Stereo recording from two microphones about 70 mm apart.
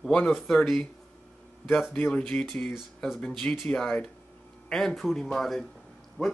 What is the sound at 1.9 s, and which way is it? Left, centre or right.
Speech, centre.